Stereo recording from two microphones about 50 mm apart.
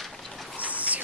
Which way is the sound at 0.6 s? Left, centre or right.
Right.